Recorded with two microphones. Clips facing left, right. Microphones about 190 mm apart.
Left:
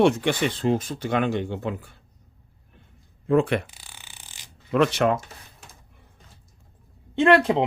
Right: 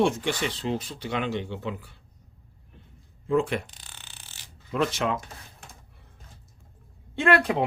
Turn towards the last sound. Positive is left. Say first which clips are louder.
# left 5 dB
turn(degrees=25)  # may be behind; listen again after turning